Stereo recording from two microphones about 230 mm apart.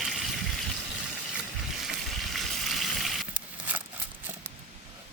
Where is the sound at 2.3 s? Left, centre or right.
Centre.